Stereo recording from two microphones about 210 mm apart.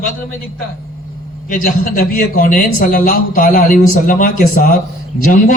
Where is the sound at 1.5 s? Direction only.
40° left (ahead or behind).